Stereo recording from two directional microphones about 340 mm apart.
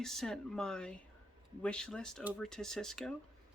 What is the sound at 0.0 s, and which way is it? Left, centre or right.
Speech, centre.